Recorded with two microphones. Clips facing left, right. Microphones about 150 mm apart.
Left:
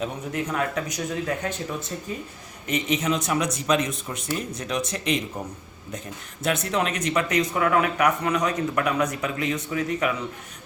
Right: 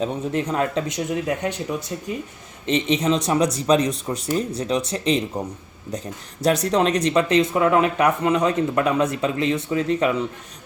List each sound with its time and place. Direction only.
0.0 s speech: 30° right (ahead or behind); by 2.1 s 15° right (ahead or behind)
2.6 s speech: 30° right (ahead or behind)
6.4 s speech: 35° right (ahead or behind)